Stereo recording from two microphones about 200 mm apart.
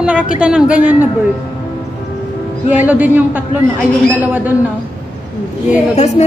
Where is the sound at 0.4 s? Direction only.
5° right (ahead or behind).